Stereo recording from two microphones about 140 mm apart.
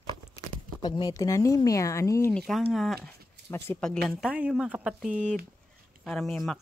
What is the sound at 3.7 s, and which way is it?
Speech, 5° left (ahead or behind).